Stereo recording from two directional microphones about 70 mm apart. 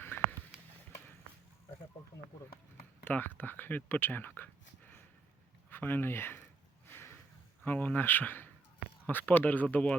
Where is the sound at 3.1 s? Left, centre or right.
Left.